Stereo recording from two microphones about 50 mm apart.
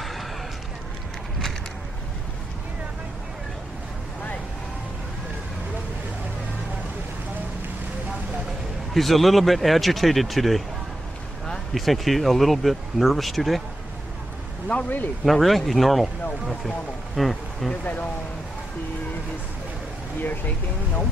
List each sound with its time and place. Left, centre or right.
0.0 s a sound: centre
8.9 s speech: centre
11.7 s speech: centre
14.7 s speech: left
15.2 s speech: centre
17.1 s a sound: centre
17.8 s speech: left
20.2 s speech: left